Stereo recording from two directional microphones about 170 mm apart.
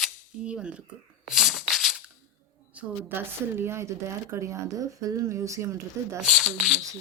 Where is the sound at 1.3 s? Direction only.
Centre (ahead or behind).